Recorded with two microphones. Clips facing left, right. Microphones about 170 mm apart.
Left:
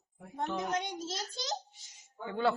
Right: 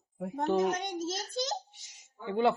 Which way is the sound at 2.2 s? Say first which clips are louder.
Right 4 dB; 20° right (ahead or behind).